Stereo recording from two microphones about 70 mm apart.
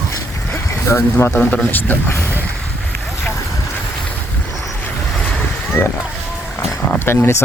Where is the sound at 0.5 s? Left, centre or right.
Left.